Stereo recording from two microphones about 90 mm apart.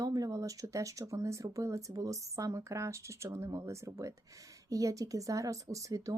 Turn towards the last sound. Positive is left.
turn(degrees=-40)  # may be behind; listen again after turning